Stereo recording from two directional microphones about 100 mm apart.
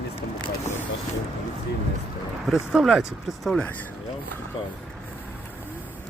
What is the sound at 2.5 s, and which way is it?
Speech, 5° right (ahead or behind).